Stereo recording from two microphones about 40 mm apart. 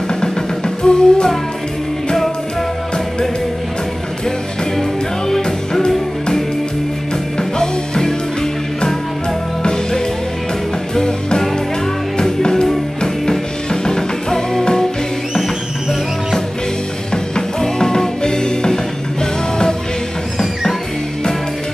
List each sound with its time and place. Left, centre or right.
0.8 s music: centre
7.3 s music: centre
9.6 s music: centre
17.1 s music: centre